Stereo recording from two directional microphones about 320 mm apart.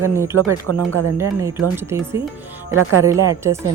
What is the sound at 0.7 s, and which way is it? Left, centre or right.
Speech, right.